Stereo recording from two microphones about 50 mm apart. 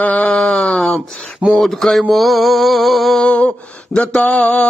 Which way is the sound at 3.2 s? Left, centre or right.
Left.